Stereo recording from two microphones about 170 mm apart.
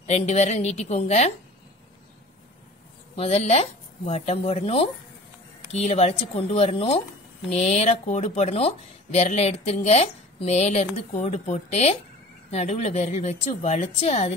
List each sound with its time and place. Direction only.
0.0 s speech: 40° left (ahead or behind)
3.2 s speech: 40° left (ahead or behind)